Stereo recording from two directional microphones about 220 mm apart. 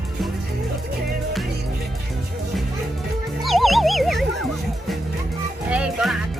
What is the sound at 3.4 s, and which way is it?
Fowl, centre (ahead or behind).